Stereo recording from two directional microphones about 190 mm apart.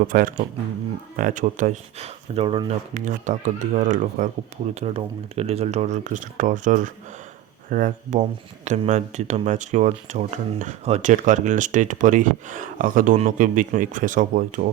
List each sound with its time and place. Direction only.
0.1 s speech: 45° right (ahead or behind); by 2.7 s 30° right (ahead or behind)
2.9 s speech: 40° right (ahead or behind)